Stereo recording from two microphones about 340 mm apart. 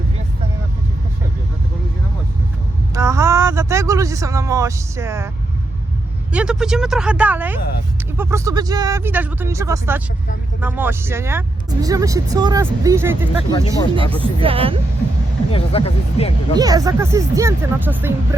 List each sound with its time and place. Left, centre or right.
2.9 s speech: centre
6.3 s speech: centre
14.0 s speech: centre
14.4 s speech: centre
15.5 s speech: centre
16.6 s speech: centre